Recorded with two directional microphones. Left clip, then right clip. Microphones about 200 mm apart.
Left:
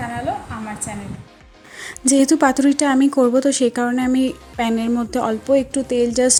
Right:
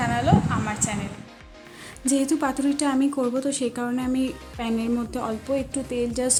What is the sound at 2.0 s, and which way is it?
Speech, 30° left (ahead or behind).